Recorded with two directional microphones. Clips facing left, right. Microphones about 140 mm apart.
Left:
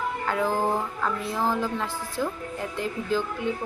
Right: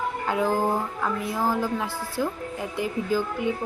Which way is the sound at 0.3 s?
15° right (ahead or behind).